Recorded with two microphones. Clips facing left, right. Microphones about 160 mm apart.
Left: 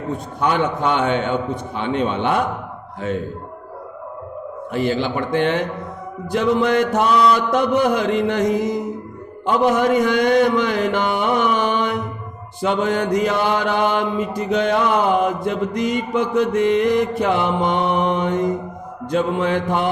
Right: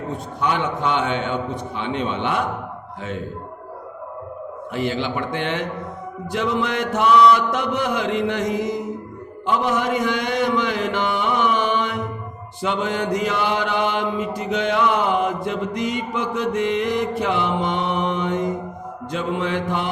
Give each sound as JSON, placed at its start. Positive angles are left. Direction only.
{"t": 0.3, "sound": "mantra", "side_deg": 45}
{"t": 4.7, "sound": "mantra", "side_deg": 40}